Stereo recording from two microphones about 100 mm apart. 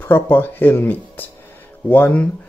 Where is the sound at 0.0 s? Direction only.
20° left (ahead or behind).